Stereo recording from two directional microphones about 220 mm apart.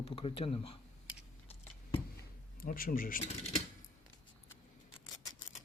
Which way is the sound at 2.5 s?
40° left (ahead or behind).